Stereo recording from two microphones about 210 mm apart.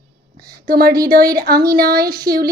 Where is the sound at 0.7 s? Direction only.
45° right (ahead or behind).